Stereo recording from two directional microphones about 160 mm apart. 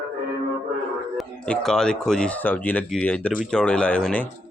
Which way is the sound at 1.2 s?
5° left (ahead or behind).